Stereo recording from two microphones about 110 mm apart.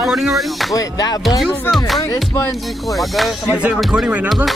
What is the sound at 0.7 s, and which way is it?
Speech, 35° left (ahead or behind).